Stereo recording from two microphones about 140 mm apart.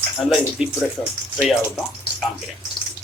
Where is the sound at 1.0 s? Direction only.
15° left (ahead or behind).